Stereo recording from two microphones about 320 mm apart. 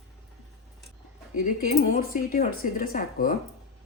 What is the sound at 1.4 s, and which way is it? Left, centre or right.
Speech, left.